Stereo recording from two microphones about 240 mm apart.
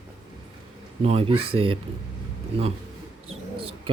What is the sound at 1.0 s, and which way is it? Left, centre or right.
Speech, right.